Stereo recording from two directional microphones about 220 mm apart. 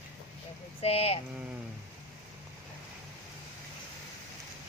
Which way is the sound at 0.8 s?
30° left (ahead or behind).